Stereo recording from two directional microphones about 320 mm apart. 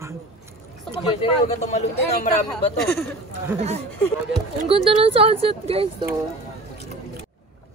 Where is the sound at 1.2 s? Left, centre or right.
Left.